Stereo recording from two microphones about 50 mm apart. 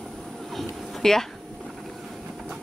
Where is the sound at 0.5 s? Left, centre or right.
Centre.